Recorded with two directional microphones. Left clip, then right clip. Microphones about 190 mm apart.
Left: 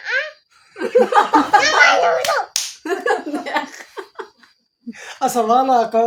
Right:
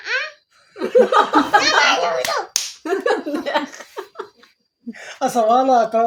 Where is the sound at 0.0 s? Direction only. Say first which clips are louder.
Left 2 dB; 20° left (ahead or behind).